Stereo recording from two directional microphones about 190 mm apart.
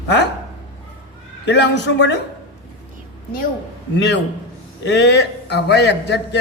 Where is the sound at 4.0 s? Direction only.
65° left (ahead or behind).